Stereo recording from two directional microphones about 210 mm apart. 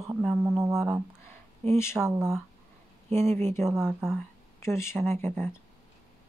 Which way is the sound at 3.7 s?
Centre (ahead or behind).